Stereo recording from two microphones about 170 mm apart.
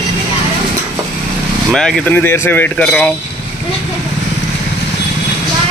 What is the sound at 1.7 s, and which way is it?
Speech, 5° left (ahead or behind).